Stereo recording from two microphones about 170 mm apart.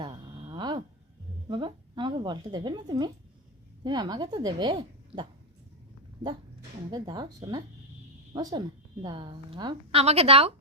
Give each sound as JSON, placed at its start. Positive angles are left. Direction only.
{"t": 0.0, "sound": "a sound", "side_deg": -30}
{"t": 1.5, "sound": "a woman's voice", "side_deg": -30}
{"t": 6.9, "sound": "a woman's voice", "side_deg": -25}